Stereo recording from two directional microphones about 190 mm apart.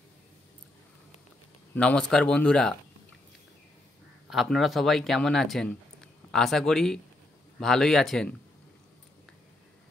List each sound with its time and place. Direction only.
1.8 s speech: 5° left (ahead or behind)
4.3 s speech: centre (ahead or behind)